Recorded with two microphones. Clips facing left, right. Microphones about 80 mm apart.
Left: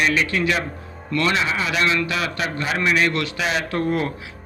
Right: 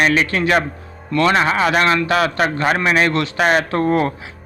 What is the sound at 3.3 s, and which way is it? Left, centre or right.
Speech, right.